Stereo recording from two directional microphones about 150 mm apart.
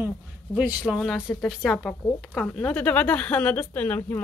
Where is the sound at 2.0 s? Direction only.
10° left (ahead or behind).